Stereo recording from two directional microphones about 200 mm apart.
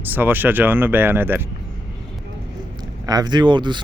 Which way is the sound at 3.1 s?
20° right (ahead or behind).